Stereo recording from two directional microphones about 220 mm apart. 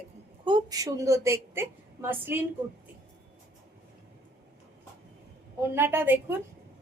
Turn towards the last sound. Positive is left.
turn(degrees=-10)  # may be behind; listen again after turning